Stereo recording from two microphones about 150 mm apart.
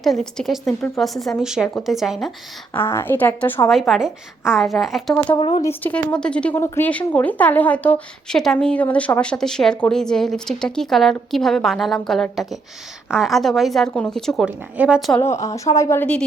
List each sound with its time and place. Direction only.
0.0 s a woman's voice: centre (ahead or behind)
2.7 s speech: 15° left (ahead or behind)
3.7 s a woman's voice: centre (ahead or behind)
5.4 s speech: 35° left (ahead or behind)
5.6 s a woman's voice: 10° left (ahead or behind); by 15.1 s 5° right (ahead or behind)
15.2 s speech: 20° left (ahead or behind)